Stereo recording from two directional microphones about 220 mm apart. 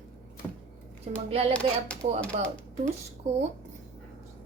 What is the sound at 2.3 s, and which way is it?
Speech, 30° right (ahead or behind).